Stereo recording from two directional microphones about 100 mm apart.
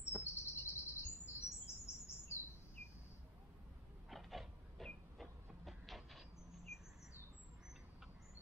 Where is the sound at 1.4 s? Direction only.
25° left (ahead or behind).